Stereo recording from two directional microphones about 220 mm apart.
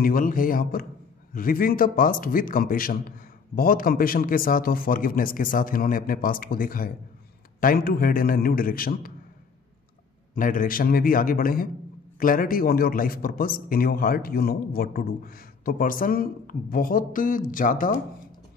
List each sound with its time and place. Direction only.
0.0 s a man's voice: 40° left (ahead or behind)
10.3 s a man's voice: 40° left (ahead or behind)